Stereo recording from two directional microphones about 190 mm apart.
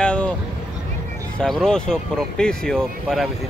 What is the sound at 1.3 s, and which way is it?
Speech, 5° left (ahead or behind).